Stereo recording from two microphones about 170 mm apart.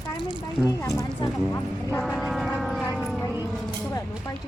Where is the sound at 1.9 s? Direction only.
Centre (ahead or behind).